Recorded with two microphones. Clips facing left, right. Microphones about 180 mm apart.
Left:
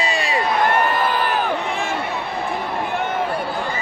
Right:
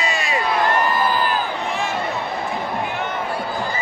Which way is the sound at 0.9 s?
65° left (ahead or behind).